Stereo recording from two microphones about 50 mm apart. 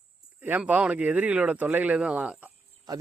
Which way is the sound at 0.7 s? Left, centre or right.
Right.